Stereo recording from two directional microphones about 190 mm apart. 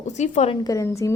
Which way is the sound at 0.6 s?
15° left (ahead or behind).